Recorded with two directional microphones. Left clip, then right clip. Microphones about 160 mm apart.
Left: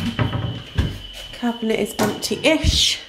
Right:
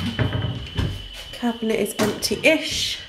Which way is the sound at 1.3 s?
5° left (ahead or behind).